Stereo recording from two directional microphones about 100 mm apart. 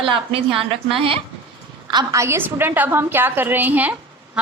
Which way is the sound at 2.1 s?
25° right (ahead or behind).